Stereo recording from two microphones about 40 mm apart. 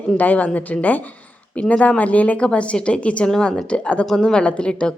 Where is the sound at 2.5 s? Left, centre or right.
Left.